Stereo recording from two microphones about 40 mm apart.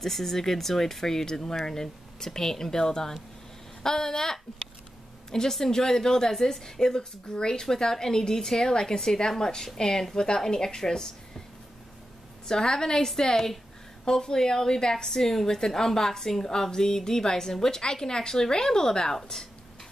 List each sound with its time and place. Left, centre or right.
0.0 s a woman's voice: centre
12.4 s a woman's voice: centre